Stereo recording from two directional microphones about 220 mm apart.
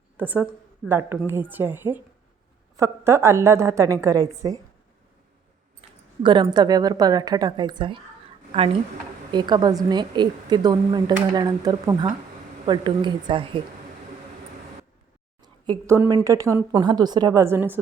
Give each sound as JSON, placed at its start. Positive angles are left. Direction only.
{"t": 0.2, "sound": "a woman's voice", "side_deg": -10}
{"t": 6.2, "sound": "a woman's voice", "side_deg": -20}
{"t": 9.3, "sound": "a woman's voice", "side_deg": -20}
{"t": 15.6, "sound": "a woman's voice", "side_deg": -15}